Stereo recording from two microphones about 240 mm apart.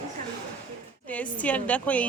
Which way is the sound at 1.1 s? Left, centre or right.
Centre.